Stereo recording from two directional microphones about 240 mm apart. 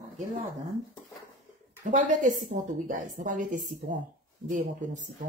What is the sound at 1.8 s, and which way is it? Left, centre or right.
A woman's voice, right.